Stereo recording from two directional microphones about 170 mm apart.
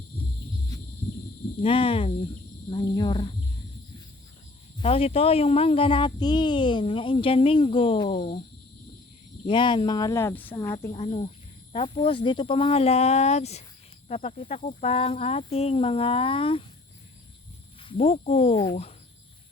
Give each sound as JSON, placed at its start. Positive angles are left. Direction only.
{"t": 0.2, "sound": "a sound", "side_deg": 30}
{"t": 1.6, "sound": "speech", "side_deg": 30}
{"t": 4.8, "sound": "speech", "side_deg": 35}
{"t": 9.5, "sound": "speech", "side_deg": 25}
{"t": 10.9, "sound": "speech", "side_deg": 35}
{"t": 17.8, "sound": "speech", "side_deg": 40}
{"t": 18.5, "sound": "speech", "side_deg": 20}